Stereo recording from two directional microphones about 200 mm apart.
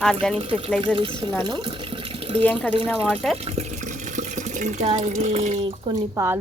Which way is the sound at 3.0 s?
Centre (ahead or behind).